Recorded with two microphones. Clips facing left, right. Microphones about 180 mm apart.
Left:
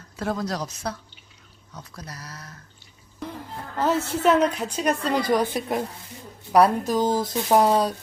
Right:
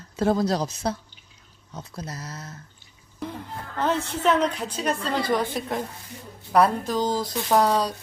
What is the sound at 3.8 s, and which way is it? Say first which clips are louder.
Speech: left 2 dB; 5° left (ahead or behind).